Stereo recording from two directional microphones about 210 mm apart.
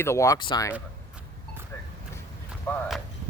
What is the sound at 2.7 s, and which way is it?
Speech, 10° left (ahead or behind).